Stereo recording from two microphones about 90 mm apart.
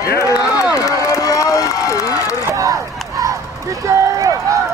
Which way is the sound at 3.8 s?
40° right (ahead or behind).